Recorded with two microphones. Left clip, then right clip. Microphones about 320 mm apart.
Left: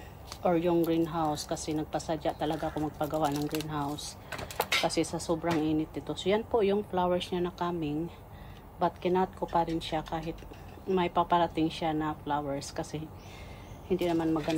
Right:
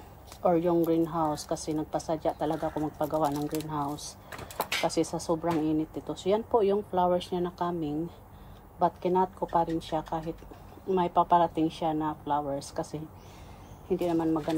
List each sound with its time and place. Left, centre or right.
0.4 s a woman's voice: centre
3.2 s speech: centre
3.5 s a woman's voice: right